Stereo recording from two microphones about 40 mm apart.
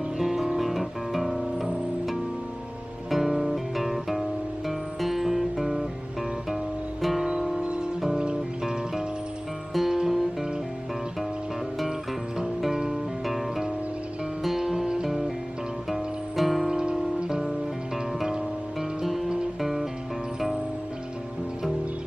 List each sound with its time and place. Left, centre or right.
0.2 s guitar: centre
3.1 s guitar: centre
8.2 s music: right
9.8 s music: centre
12.4 s music: centre
14.4 s music: centre
16.6 s music: centre
18.8 s music: centre